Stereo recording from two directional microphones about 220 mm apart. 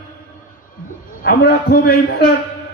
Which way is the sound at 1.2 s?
45° left (ahead or behind).